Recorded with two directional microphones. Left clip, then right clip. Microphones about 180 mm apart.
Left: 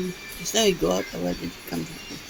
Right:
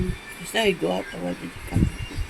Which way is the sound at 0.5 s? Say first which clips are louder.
Left 1 dB; 20° left (ahead or behind).